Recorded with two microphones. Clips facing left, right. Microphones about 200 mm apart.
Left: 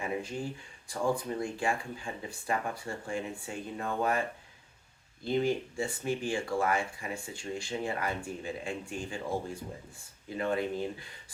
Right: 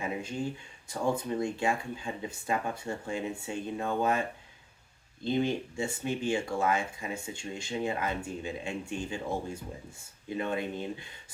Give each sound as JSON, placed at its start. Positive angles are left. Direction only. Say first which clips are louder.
{"t": 0.0, "sound": "a sound", "louder": "even", "side_deg": -25}
{"t": 0.9, "sound": "speech", "louder": "right 1 dB", "side_deg": -25}
{"t": 5.2, "sound": "speech", "louder": "even", "side_deg": -25}